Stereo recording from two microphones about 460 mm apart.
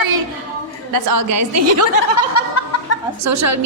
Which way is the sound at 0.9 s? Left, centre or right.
Right.